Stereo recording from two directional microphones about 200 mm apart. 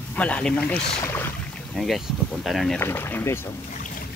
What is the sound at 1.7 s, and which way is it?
Speech, centre (ahead or behind).